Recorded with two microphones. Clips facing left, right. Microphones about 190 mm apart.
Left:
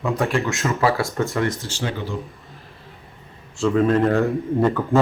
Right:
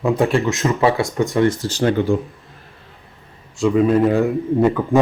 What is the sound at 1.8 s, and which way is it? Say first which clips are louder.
Speech: right 11 dB; 50° right (ahead or behind).